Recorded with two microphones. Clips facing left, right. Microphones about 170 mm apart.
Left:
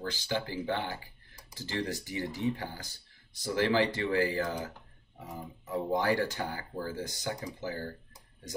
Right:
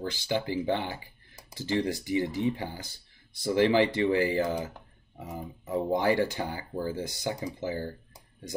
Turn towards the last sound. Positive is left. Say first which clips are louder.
# right 4 dB
turn(degrees=-15)  # may be behind; listen again after turning